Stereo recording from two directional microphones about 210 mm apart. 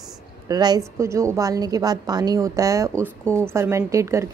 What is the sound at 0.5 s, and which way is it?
A woman's voice, 20° right (ahead or behind).